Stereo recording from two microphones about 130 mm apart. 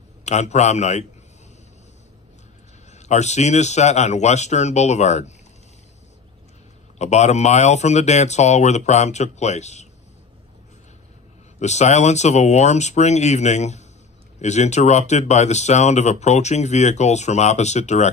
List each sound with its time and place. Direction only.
0.2 s speech: 60° left (ahead or behind)
2.9 s speech: 60° left (ahead or behind)
7.0 s speech: 60° left (ahead or behind)
11.6 s speech: 60° left (ahead or behind)